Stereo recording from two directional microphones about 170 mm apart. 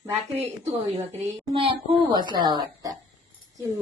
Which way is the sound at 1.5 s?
30° right (ahead or behind).